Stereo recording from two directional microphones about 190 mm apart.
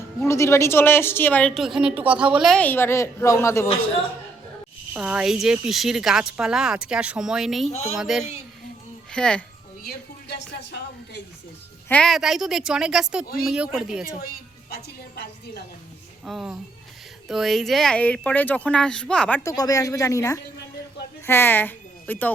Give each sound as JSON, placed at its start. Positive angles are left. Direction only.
{"t": 0.3, "sound": "a woman's voice", "side_deg": 15}
{"t": 4.9, "sound": "speech", "side_deg": -5}
{"t": 7.7, "sound": "speech", "side_deg": 35}
{"t": 7.9, "sound": "speech", "side_deg": 0}
{"t": 9.8, "sound": "speech", "side_deg": 60}
{"t": 11.9, "sound": "speech", "side_deg": 5}
{"t": 14.2, "sound": "a woman's voice", "side_deg": 50}
{"t": 16.2, "sound": "speech", "side_deg": 0}
{"t": 19.4, "sound": "a woman's voice", "side_deg": 15}